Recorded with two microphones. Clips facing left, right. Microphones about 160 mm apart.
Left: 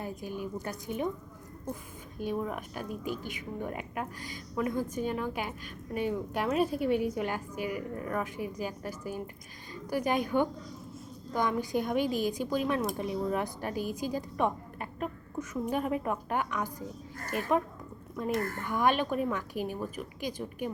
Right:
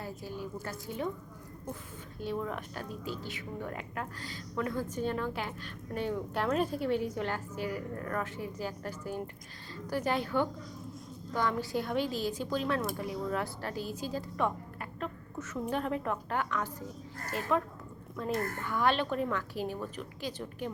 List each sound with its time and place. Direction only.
0.0 s speech: 15° left (ahead or behind)